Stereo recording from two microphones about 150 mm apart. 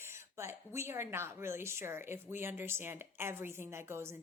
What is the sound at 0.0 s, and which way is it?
A woman's voice, 15° right (ahead or behind).